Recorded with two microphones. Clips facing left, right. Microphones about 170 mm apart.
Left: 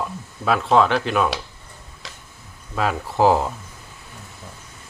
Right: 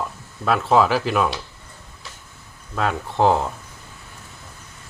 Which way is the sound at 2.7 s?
5° left (ahead or behind).